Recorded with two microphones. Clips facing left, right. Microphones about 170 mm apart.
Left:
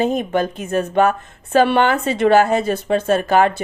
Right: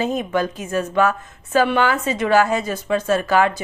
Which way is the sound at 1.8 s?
55° left (ahead or behind).